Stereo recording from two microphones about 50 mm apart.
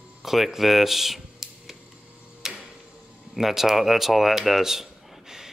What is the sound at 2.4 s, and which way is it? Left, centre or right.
Tick-tock, centre.